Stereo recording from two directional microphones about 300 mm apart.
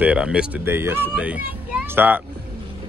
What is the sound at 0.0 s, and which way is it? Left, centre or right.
Speech, centre.